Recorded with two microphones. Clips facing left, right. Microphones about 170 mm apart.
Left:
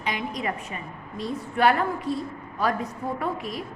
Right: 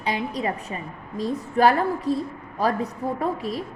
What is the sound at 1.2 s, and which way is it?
A woman's voice, 35° right (ahead or behind).